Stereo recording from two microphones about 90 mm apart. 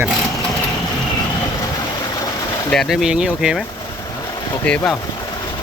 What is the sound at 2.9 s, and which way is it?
Speech, 5° right (ahead or behind).